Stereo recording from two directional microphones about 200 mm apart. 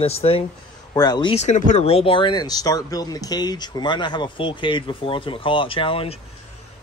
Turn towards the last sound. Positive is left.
turn(degrees=25)  # may be behind; listen again after turning